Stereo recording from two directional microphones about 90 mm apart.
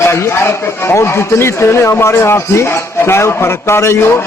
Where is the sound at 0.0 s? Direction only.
30° left (ahead or behind).